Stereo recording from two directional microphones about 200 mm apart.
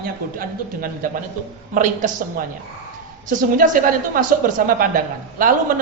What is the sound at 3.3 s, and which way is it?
A woman's voice, 40° right (ahead or behind).